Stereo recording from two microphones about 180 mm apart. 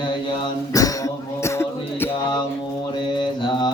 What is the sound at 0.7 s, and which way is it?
Mantra, 20° left (ahead or behind).